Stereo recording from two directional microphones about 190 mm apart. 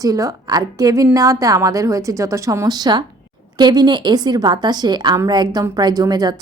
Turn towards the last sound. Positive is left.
turn(degrees=-20)  # may be behind; listen again after turning